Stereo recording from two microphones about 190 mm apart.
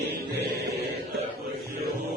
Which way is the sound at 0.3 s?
55° right (ahead or behind).